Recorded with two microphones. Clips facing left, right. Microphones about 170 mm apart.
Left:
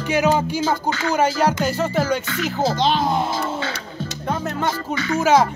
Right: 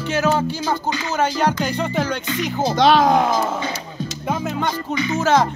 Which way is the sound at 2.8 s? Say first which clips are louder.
Right 9 dB; 85° right.